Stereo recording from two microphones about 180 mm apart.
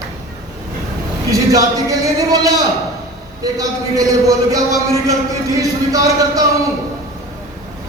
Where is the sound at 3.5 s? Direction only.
20° right (ahead or behind).